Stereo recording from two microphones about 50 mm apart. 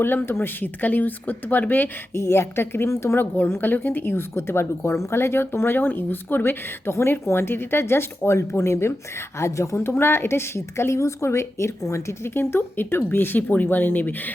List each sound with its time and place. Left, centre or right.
0.0 s speech: left
2.1 s speech: left
3.2 s speech: left
4.1 s speech: left
9.4 s a woman's voice: left
9.7 s speech: left